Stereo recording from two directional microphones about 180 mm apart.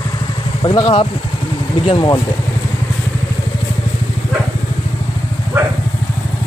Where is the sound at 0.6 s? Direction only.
25° left (ahead or behind).